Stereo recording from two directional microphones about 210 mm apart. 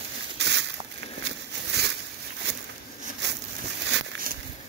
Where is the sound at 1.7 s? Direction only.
50° right (ahead or behind).